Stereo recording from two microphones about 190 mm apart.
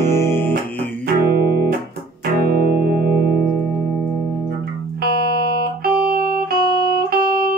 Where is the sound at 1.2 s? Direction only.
55° right (ahead or behind).